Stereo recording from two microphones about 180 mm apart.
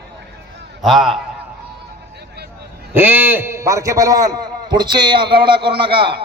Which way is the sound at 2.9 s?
10° right (ahead or behind).